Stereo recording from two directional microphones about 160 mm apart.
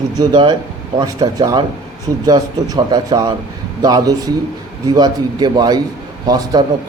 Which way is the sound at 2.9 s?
25° right (ahead or behind).